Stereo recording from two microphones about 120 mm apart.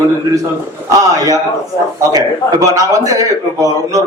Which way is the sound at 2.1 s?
30° right (ahead or behind).